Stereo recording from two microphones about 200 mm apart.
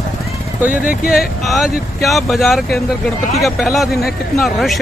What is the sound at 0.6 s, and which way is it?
Speech, 45° left (ahead or behind).